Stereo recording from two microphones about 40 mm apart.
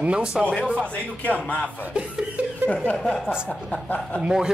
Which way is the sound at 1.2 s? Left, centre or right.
Left.